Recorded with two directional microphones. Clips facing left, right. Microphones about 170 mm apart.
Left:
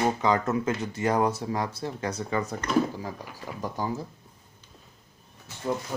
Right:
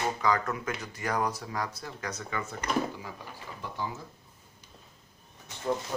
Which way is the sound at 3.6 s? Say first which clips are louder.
Left 6 dB; 40° left (ahead or behind).